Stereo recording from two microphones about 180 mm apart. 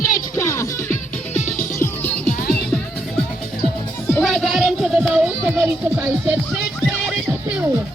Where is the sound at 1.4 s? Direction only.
40° left (ahead or behind).